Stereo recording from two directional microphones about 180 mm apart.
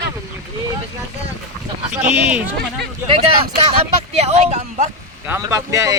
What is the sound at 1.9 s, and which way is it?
Speech, 10° right (ahead or behind).